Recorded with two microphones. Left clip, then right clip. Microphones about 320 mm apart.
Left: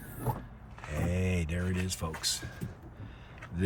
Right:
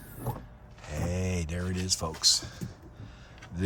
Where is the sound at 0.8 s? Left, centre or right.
Centre.